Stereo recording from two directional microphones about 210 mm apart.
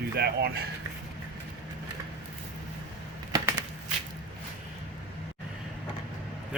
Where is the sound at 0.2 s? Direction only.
50° right (ahead or behind).